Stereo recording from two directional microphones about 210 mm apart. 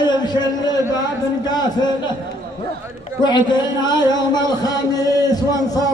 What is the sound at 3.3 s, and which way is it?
A man's voice, 20° left (ahead or behind).